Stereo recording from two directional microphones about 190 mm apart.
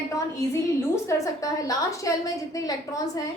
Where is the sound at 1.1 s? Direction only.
15° left (ahead or behind).